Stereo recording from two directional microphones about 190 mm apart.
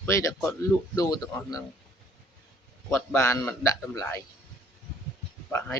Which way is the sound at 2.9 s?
15° left (ahead or behind).